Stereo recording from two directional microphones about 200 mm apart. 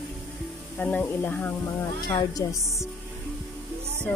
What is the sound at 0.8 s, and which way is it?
Speech, 5° left (ahead or behind).